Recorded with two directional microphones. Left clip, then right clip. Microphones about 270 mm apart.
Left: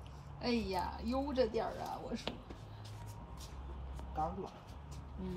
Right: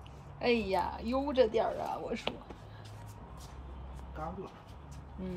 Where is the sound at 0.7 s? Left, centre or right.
Right.